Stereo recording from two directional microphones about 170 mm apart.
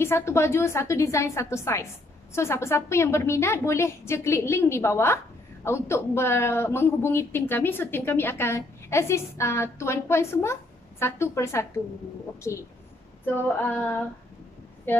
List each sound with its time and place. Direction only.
0.0 s a woman's voice: 15° left (ahead or behind)